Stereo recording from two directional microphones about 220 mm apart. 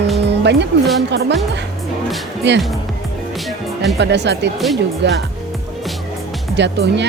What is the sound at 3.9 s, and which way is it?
Speech, 50° right (ahead or behind).